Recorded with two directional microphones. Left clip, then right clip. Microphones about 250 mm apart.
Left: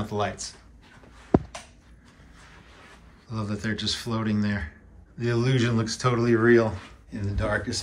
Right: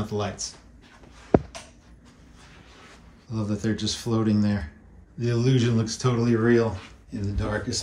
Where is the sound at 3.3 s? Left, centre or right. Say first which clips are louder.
Right 2 dB; centre.